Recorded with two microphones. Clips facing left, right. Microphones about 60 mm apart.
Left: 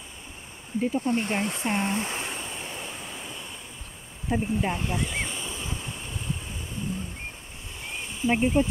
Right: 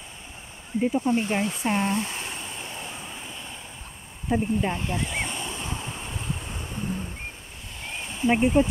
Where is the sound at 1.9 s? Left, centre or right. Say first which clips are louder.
Right 2 dB; left.